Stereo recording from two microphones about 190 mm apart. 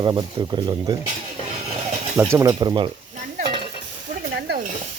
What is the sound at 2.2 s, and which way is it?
Speech, 15° right (ahead or behind).